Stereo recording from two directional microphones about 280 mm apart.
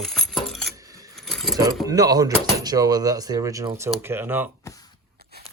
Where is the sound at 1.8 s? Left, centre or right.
Centre.